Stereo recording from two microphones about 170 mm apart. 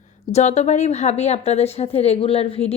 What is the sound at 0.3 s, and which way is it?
A woman's voice, 40° left (ahead or behind).